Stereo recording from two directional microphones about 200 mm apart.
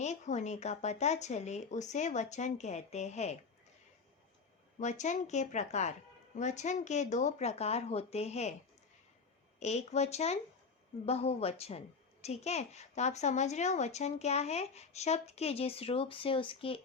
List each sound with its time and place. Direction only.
0.0 s speech: 35° left (ahead or behind)
4.8 s speech: 35° left (ahead or behind)
9.6 s speech: 35° left (ahead or behind)